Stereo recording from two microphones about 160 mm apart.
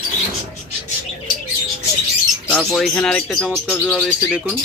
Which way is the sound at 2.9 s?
10° left (ahead or behind).